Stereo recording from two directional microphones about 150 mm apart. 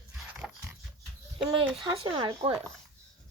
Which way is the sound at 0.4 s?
Centre (ahead or behind).